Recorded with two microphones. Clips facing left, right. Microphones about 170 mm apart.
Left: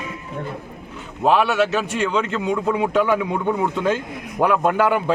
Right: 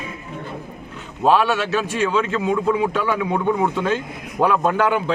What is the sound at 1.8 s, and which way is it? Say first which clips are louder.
A man's voice: right 1 dB; 20° left (ahead or behind).